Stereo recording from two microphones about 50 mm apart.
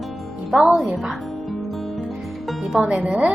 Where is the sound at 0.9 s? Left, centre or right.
Centre.